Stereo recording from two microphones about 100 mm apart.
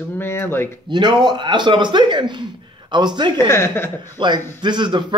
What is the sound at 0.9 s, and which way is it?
A man's voice, 45° right (ahead or behind).